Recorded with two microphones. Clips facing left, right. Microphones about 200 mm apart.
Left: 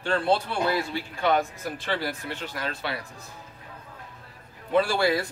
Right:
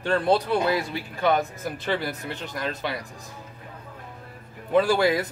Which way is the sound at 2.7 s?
15° right (ahead or behind).